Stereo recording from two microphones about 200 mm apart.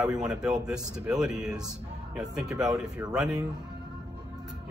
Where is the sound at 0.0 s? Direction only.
5° right (ahead or behind).